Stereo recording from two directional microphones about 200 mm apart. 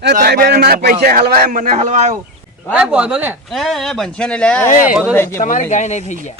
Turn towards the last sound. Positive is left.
turn(degrees=35)  # may be behind; listen again after turning